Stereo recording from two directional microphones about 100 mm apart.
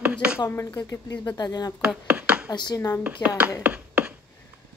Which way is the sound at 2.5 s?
45° left (ahead or behind).